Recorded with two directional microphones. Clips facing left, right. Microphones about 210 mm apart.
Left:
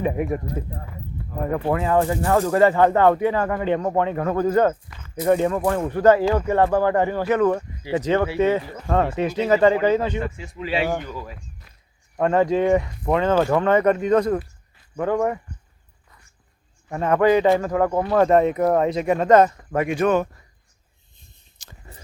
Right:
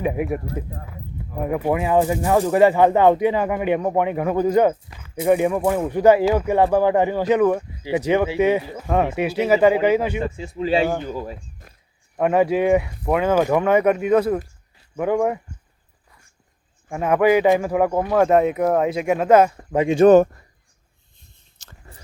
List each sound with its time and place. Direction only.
0.0 s speech: 5° right (ahead or behind)
10.2 s speech: 30° right (ahead or behind)
12.1 s speech: 10° right (ahead or behind)
16.9 s speech: 10° right (ahead or behind)
19.7 s speech: 20° right (ahead or behind)
20.1 s speech: 45° right (ahead or behind)
21.6 s a sound: 15° left (ahead or behind)